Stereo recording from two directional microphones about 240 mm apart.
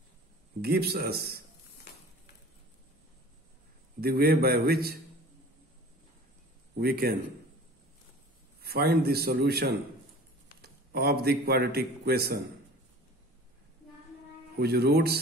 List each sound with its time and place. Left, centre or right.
0.6 s a man's voice: right
4.0 s a man's voice: right
6.8 s a man's voice: right
8.6 s a man's voice: right
14.6 s a man's voice: right